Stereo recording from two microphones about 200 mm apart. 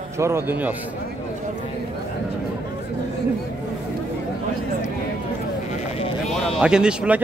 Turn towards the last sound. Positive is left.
turn(degrees=-5)  # may be behind; listen again after turning